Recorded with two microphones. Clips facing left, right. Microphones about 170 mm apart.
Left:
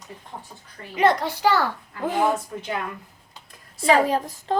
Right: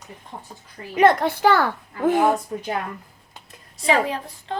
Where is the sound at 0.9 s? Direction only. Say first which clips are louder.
Right 3 dB; 55° right (ahead or behind).